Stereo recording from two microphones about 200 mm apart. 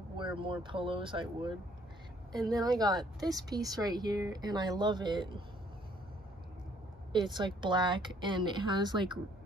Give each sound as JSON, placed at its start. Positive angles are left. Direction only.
{"t": 0.2, "sound": "a woman's voice", "side_deg": -25}
{"t": 7.1, "sound": "a woman's voice", "side_deg": -20}